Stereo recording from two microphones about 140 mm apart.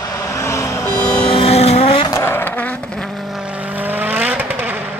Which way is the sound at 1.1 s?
35° left (ahead or behind).